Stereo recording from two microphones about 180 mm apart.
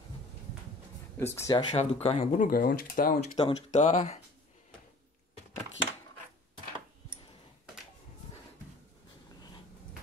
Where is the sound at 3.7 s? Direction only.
35° left (ahead or behind).